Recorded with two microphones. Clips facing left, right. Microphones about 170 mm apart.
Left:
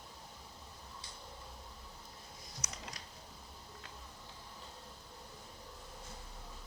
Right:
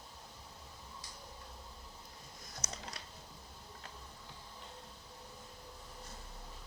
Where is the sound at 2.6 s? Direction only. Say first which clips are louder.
Right 2 dB; 30° right (ahead or behind).